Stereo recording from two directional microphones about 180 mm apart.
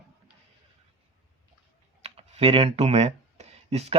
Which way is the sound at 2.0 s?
35° right (ahead or behind).